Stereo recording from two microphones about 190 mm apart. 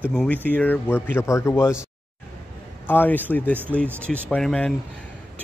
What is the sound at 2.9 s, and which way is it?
Speech, 10° left (ahead or behind).